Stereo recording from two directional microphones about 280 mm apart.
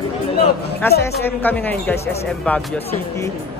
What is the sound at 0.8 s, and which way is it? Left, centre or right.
Speech, centre.